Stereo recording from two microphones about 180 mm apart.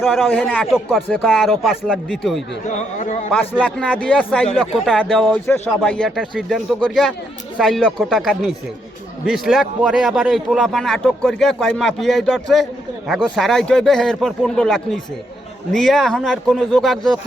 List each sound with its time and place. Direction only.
0.0 s a man's voice: centre (ahead or behind)
0.4 s a man's voice: 10° left (ahead or behind)
2.6 s a man's voice: 40° left (ahead or behind)
3.9 s a man's voice: 5° left (ahead or behind)